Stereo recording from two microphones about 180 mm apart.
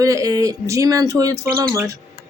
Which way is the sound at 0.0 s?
20° right (ahead or behind).